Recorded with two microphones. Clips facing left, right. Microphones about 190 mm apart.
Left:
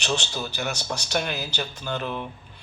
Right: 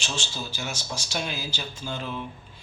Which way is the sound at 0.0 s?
65° left (ahead or behind).